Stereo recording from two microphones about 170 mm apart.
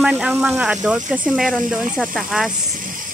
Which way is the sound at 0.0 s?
5° right (ahead or behind).